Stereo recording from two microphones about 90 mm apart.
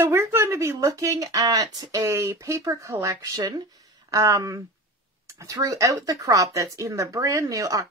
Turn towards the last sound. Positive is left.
turn(degrees=-40)  # may be behind; listen again after turning